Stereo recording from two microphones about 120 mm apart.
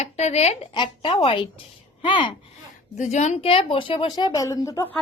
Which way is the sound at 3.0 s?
80° left.